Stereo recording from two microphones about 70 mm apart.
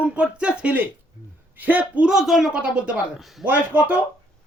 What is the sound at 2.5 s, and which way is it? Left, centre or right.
Speech, centre.